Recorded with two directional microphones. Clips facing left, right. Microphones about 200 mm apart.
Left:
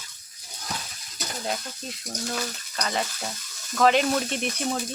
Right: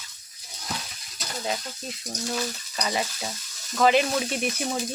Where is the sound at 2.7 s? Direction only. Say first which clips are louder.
Even; 5° right (ahead or behind).